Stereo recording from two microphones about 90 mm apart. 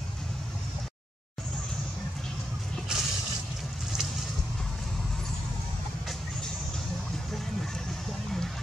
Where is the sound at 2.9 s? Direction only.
10° right (ahead or behind).